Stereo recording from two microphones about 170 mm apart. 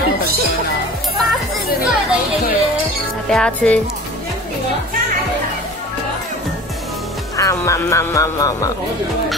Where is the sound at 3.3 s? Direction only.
5° left (ahead or behind).